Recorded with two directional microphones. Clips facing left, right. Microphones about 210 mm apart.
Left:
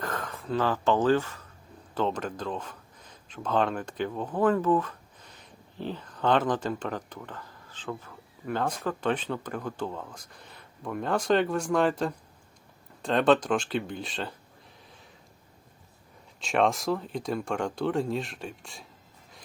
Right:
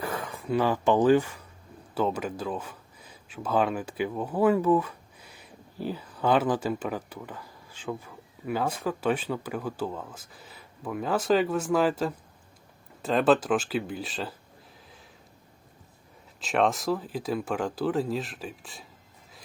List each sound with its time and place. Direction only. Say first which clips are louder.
0.0 s speech: right 1 dB; 10° right (ahead or behind)
16.4 s speech: even; centre (ahead or behind)